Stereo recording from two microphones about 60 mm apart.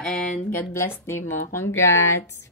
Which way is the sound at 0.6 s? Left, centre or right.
Left.